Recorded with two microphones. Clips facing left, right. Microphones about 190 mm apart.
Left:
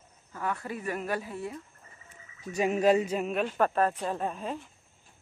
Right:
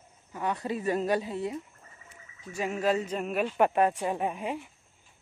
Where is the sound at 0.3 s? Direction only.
20° right (ahead or behind).